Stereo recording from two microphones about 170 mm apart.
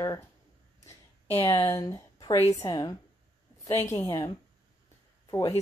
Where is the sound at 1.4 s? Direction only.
15° left (ahead or behind).